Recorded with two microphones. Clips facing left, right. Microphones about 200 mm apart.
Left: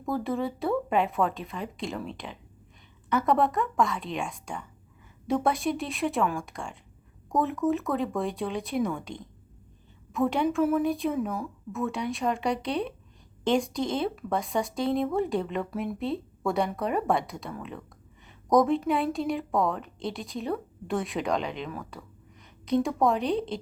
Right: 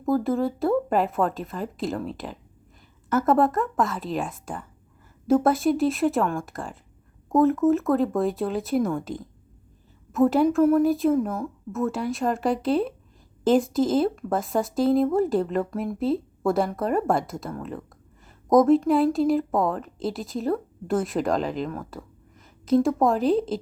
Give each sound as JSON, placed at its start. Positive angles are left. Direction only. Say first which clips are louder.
{"t": 0.0, "sound": "a woman's voice", "louder": "right 6 dB", "side_deg": 0}